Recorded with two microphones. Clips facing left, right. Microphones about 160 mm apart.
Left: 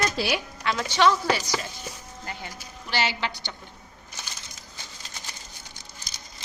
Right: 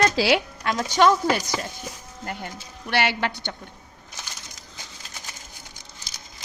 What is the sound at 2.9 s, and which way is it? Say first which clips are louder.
Speech: right 4 dB; 60° right (ahead or behind).